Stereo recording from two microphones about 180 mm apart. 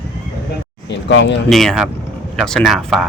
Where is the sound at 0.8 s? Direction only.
80° left.